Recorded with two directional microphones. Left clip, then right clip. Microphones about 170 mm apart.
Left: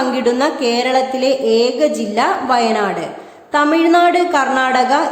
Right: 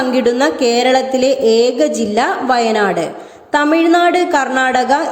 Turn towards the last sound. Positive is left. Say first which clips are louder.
# right 1 dB
turn(degrees=-20)  # may be behind; listen again after turning